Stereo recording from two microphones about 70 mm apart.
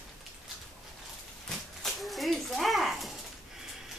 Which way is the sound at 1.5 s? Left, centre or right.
Centre.